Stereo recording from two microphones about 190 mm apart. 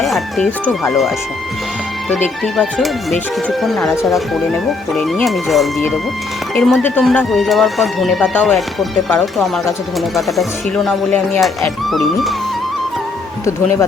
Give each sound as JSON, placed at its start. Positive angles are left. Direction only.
{"t": 0.0, "sound": "speech", "side_deg": 0}
{"t": 2.0, "sound": "speech", "side_deg": 10}
{"t": 13.4, "sound": "speech", "side_deg": 15}